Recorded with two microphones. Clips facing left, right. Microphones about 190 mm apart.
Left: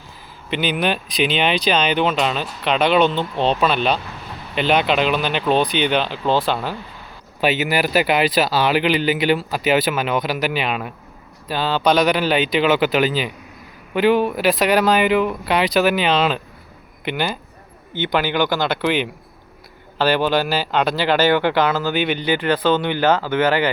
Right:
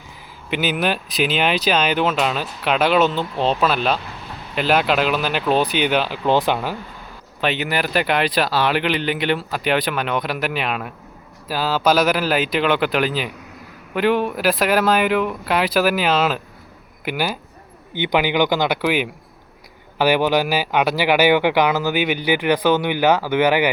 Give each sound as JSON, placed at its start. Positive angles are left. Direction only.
{"t": 0.5, "sound": "speech", "side_deg": -5}
{"t": 7.4, "sound": "speech", "side_deg": 5}